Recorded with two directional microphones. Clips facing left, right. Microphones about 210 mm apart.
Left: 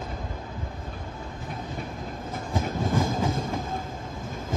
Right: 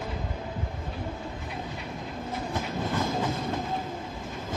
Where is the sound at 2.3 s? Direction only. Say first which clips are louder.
Left 2 dB; 50° left (ahead or behind).